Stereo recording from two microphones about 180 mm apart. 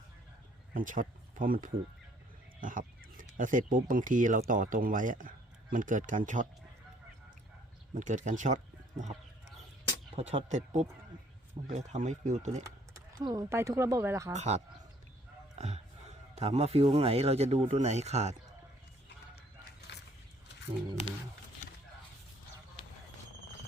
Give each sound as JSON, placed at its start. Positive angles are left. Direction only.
{"t": 0.7, "sound": "speech", "side_deg": -50}
{"t": 7.9, "sound": "speech", "side_deg": -45}
{"t": 10.2, "sound": "speech", "side_deg": -35}
{"t": 12.6, "sound": "speech", "side_deg": -20}
{"t": 14.3, "sound": "speech", "side_deg": -40}
{"t": 19.9, "sound": "a sound", "side_deg": 70}